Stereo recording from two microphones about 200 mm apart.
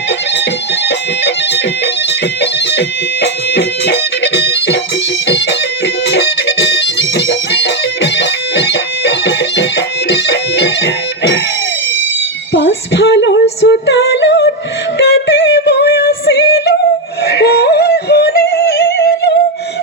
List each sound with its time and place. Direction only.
0.9 s music: 60° left (ahead or behind)
6.1 s music: 60° left (ahead or behind)
12.5 s female singing: 65° left (ahead or behind)
14.9 s music: 60° left (ahead or behind)
17.2 s yodeling: 55° left (ahead or behind)